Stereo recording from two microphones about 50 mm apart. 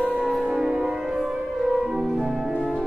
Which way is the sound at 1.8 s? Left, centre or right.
Centre.